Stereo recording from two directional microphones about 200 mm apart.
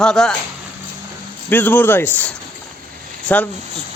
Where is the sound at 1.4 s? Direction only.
10° left (ahead or behind).